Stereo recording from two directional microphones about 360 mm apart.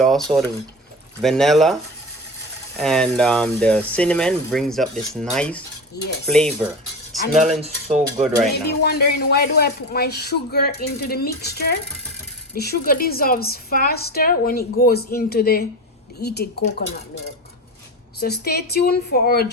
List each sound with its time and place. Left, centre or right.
0.0 s speech: centre
2.7 s speech: centre
7.9 s speech: centre
8.8 s a woman's voice: left
18.2 s a woman's voice: left